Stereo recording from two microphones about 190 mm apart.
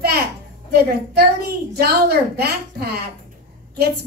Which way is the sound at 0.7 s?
55° right (ahead or behind).